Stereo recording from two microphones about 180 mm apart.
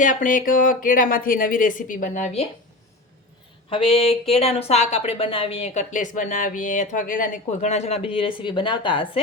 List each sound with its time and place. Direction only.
0.0 s speech: 45° left (ahead or behind)
3.7 s speech: 30° left (ahead or behind)